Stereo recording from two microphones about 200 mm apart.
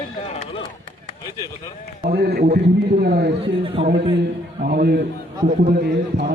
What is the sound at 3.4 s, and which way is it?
Speech, 25° right (ahead or behind).